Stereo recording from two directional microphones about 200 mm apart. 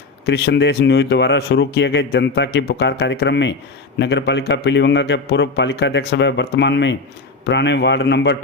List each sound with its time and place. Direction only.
0.3 s speech: 55° left (ahead or behind)